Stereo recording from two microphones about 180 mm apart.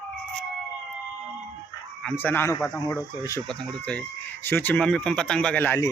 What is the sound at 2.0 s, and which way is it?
Speech, 5° left (ahead or behind).